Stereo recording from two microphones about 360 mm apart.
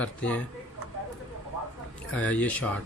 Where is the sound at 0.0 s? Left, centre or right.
Centre.